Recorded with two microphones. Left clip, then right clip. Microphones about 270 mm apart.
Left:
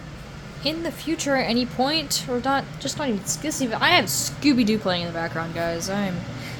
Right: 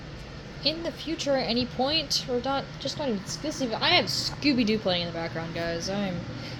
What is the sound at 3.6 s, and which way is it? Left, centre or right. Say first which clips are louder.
A woman's voice: left 4 dB; left.